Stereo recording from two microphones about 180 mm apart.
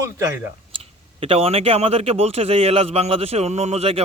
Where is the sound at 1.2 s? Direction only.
30° right (ahead or behind).